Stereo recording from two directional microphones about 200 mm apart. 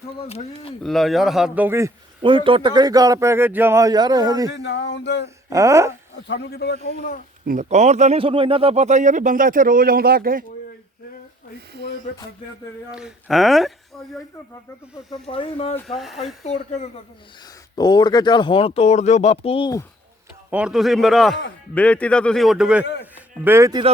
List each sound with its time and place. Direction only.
0.3 s speech: 30° left (ahead or behind)
0.8 s a man's voice: centre (ahead or behind)
2.2 s a man's voice: 25° right (ahead or behind)
4.5 s a sound: 60° left (ahead or behind)
5.5 s speech: 15° right (ahead or behind)
6.2 s a man's voice: 60° left (ahead or behind)
7.4 s speech: 40° right (ahead or behind)
12.9 s a man's voice: 5° right (ahead or behind)
15.1 s speech: 25° left (ahead or behind)
15.7 s a man's voice: centre (ahead or behind)
16.1 s speech: 35° left (ahead or behind)
17.4 s speech: 20° left (ahead or behind)
20.5 s a man's voice: 5° right (ahead or behind)